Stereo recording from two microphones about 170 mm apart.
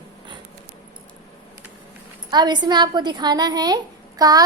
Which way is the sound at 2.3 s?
25° right (ahead or behind).